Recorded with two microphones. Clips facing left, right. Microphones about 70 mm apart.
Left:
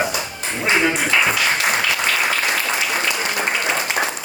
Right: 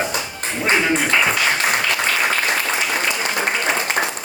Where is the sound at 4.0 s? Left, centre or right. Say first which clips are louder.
Even; right.